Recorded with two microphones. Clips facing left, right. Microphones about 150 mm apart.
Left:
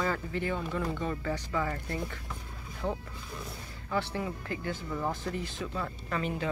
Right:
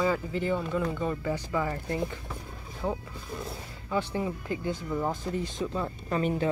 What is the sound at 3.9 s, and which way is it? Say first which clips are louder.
Speech: right 3 dB; 20° right (ahead or behind).